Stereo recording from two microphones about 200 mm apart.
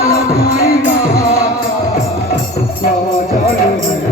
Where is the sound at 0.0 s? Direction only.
15° left (ahead or behind).